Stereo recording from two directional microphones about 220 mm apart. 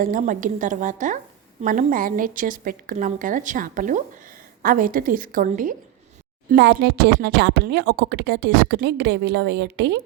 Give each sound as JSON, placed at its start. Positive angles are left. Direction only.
{"t": 0.0, "sound": "a woman's voice", "side_deg": -40}
{"t": 6.5, "sound": "speech", "side_deg": -50}